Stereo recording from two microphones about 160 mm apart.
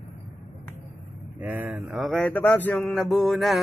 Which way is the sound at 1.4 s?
10° right (ahead or behind).